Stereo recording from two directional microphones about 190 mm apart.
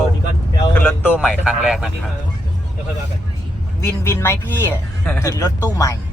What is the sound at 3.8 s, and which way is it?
Speech, 15° left (ahead or behind).